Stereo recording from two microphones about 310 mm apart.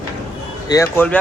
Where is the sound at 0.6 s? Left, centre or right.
Centre.